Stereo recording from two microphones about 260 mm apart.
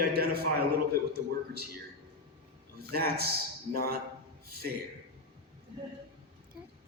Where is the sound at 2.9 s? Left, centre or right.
Right.